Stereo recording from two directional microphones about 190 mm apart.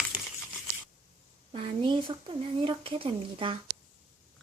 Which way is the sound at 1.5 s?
30° right (ahead or behind).